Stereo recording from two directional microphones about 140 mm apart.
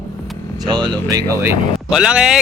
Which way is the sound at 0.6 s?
30° right (ahead or behind).